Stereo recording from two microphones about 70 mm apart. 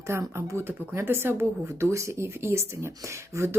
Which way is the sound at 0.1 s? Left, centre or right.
Right.